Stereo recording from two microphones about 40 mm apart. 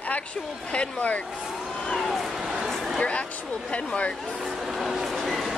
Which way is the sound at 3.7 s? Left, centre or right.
Left.